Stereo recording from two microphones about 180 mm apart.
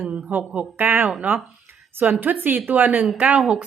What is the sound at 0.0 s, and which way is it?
Speech, 10° right (ahead or behind).